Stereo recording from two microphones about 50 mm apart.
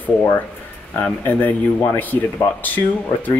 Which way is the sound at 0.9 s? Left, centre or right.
Left.